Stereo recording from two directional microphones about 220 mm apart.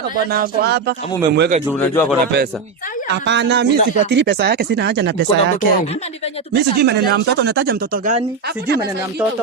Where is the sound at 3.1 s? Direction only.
50° right (ahead or behind).